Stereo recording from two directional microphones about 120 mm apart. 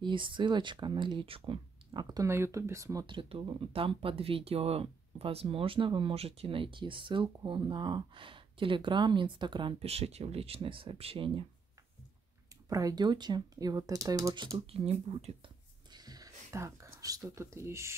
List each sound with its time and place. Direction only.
0.0 s speech: 45° right (ahead or behind)
2.2 s speech: 25° right (ahead or behind)
3.1 s speech: 45° right (ahead or behind)
12.6 s speech: 30° right (ahead or behind)
14.7 s speech: 55° right (ahead or behind)
15.9 s a sound: 35° right (ahead or behind)